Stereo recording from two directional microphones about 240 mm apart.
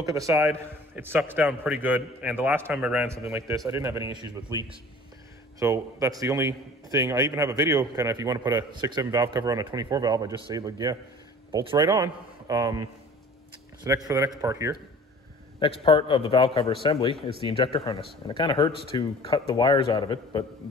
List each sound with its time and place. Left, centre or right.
0.0 s a man's voice: centre
5.6 s a man's voice: centre
13.8 s a man's voice: centre
15.6 s speech: left